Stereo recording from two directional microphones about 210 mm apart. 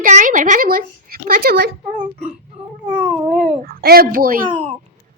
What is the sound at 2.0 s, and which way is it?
Speech, 30° right (ahead or behind).